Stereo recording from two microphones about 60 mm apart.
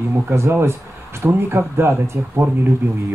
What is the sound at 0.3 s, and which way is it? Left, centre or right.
Speech, right.